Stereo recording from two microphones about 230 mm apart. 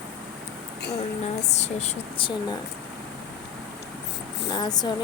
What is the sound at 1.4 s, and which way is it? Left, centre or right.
Speech, left.